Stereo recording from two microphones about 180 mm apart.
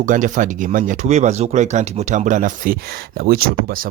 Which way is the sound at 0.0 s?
45° right (ahead or behind).